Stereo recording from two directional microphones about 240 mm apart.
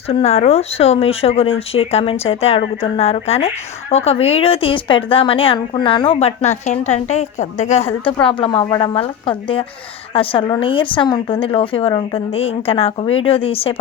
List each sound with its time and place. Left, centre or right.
0.1 s speech: left